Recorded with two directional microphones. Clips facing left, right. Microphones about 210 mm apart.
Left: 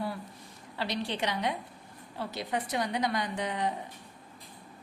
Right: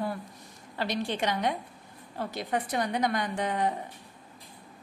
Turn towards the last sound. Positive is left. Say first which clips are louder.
# right 3 dB
turn(degrees=-50)  # may be behind; listen again after turning